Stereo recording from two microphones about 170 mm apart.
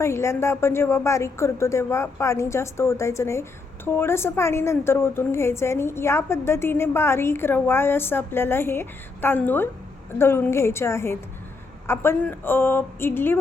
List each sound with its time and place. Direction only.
0.0 s a woman's voice: 15° left (ahead or behind)